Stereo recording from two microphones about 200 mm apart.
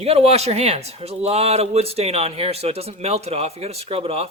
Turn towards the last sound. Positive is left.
turn(degrees=-30)  # may be behind; listen again after turning